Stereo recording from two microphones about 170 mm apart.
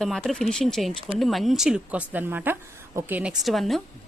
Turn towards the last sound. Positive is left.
turn(degrees=0)  # may be behind; listen again after turning